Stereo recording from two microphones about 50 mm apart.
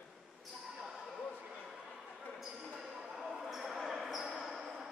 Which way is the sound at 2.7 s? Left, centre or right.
Centre.